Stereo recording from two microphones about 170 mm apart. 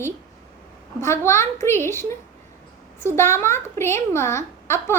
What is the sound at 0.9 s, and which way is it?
A child's voice, 15° left (ahead or behind).